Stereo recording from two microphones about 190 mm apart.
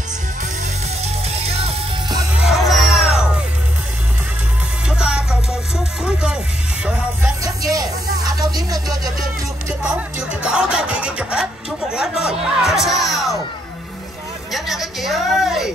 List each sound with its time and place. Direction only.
1.0 s music: 30° right (ahead or behind)
2.4 s music: centre (ahead or behind)
4.8 s music: 5° right (ahead or behind)
7.4 s a sound: 20° right (ahead or behind)
8.5 s music: 20° right (ahead or behind)
9.8 s music: 5° right (ahead or behind)
14.5 s music: centre (ahead or behind)